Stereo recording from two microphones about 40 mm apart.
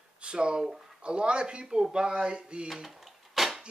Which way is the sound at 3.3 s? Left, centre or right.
Centre.